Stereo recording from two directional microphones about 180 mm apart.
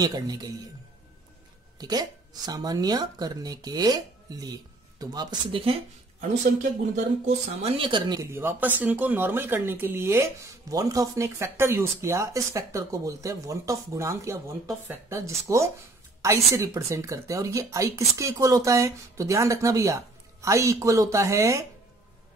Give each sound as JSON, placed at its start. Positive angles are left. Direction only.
{"t": 0.0, "sound": "speech", "side_deg": -20}
{"t": 1.8, "sound": "speech", "side_deg": -20}
{"t": 7.2, "sound": "a woman's voice", "side_deg": -30}